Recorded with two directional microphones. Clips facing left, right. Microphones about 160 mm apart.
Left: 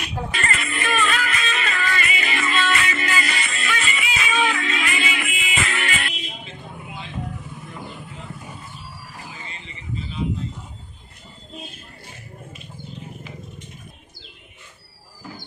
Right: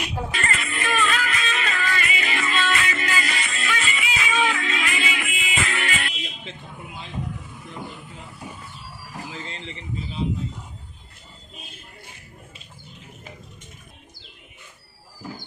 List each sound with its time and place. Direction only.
0.0 s music: 5° right (ahead or behind)
0.3 s music: 75° left (ahead or behind)